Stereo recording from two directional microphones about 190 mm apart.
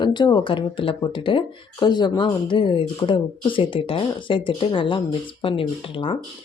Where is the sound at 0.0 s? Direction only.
25° left (ahead or behind).